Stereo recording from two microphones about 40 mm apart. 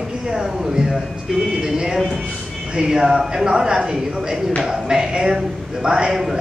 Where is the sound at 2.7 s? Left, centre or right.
Centre.